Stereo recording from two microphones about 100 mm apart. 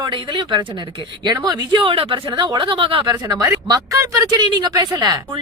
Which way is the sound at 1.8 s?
70° right (ahead or behind).